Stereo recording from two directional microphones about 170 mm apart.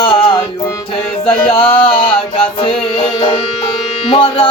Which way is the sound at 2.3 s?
30° left (ahead or behind).